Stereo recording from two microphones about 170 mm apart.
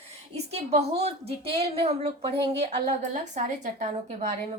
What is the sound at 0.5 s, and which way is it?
A woman's voice, 40° right (ahead or behind).